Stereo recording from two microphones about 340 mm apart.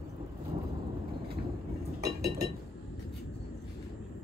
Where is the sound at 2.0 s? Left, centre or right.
Right.